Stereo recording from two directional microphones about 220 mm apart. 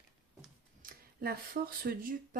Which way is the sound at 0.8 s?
40° right (ahead or behind).